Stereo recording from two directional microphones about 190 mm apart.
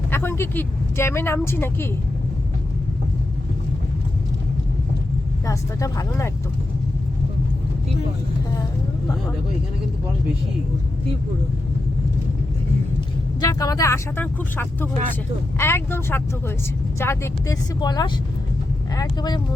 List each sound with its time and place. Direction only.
0.1 s a woman's voice: 10° left (ahead or behind)
5.5 s a woman's voice: 15° left (ahead or behind)
13.4 s a woman's voice: 20° left (ahead or behind)